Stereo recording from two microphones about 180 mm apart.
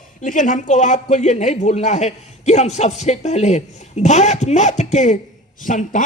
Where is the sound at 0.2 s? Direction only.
45° left (ahead or behind).